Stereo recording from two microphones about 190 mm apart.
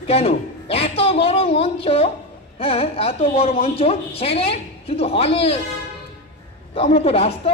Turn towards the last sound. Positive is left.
turn(degrees=30)  # may be behind; listen again after turning